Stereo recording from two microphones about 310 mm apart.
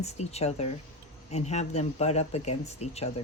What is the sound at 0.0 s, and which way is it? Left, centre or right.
Speech, left.